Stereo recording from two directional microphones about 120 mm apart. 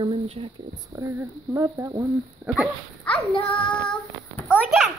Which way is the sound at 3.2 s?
10° left (ahead or behind).